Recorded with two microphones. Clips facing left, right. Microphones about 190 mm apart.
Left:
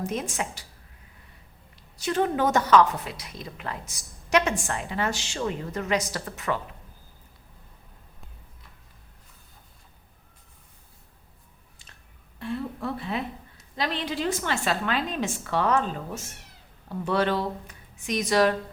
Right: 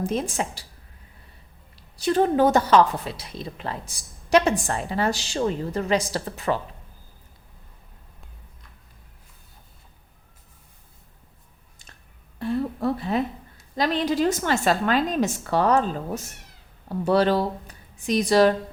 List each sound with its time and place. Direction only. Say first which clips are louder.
0.0 s a woman's voice: right 4 dB; 30° right (ahead or behind)
2.0 s a woman's voice: right 5 dB; 35° right (ahead or behind)
12.4 s a sound: right 6 dB; 40° right (ahead or behind)
13.7 s a woman's voice: right 7 dB; 40° right (ahead or behind)